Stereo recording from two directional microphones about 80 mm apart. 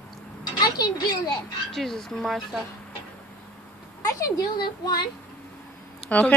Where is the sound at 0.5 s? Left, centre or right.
Left.